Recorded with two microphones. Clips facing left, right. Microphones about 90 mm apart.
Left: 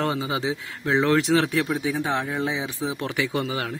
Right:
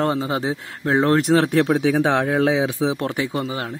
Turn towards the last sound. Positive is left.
turn(degrees=-35)  # may be behind; listen again after turning